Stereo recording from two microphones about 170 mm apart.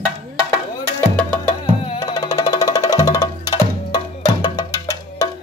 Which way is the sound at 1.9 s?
20° left (ahead or behind).